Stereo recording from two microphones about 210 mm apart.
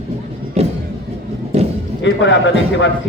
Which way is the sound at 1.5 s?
30° right (ahead or behind).